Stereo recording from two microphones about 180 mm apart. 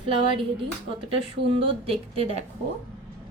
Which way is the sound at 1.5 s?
30° right (ahead or behind).